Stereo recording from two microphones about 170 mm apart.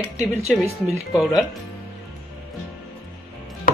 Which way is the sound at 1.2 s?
Centre (ahead or behind).